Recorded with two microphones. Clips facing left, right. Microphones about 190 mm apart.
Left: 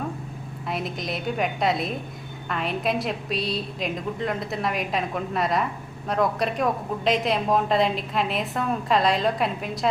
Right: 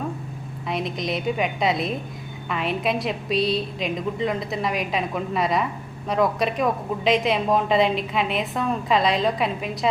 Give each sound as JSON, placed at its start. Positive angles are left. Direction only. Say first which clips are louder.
{"t": 0.7, "sound": "a woman's voice", "louder": "right 3 dB", "side_deg": 0}